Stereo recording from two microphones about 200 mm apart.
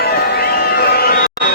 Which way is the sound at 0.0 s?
50° left (ahead or behind).